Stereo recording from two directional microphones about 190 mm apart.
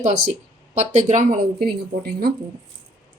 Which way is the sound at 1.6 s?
55° right (ahead or behind).